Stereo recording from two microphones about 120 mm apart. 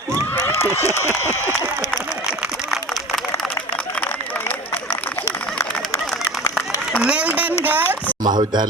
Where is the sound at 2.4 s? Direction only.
Centre (ahead or behind).